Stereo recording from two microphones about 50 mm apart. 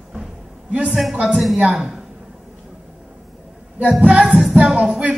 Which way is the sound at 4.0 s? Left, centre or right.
Right.